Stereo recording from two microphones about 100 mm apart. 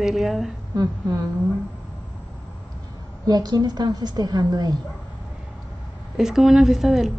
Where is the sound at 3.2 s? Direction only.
40° right (ahead or behind).